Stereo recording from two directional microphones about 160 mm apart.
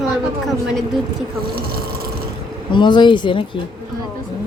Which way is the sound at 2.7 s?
30° left (ahead or behind).